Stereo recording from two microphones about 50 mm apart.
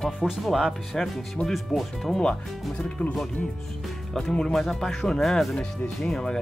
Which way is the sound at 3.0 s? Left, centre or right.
Left.